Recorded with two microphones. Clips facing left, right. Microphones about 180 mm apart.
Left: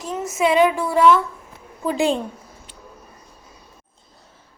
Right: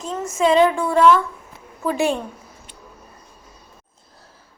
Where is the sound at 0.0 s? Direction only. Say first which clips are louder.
Right 1 dB; 5° left (ahead or behind).